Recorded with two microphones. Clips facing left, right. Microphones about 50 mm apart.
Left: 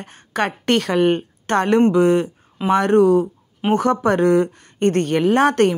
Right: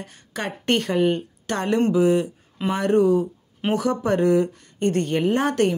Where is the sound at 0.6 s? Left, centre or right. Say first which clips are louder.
Left 2 dB; left.